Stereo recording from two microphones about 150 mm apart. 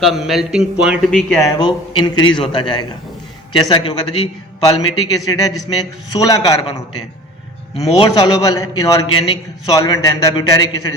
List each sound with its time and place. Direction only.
0.0 s a man's voice: centre (ahead or behind)
1.4 s a man's voice: 25° left (ahead or behind)
7.9 s a man's voice: 30° left (ahead or behind)